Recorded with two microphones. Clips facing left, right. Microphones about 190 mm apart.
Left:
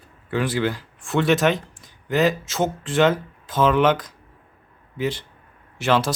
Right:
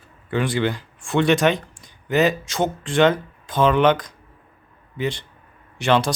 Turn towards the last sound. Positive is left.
turn(degrees=5)  # may be behind; listen again after turning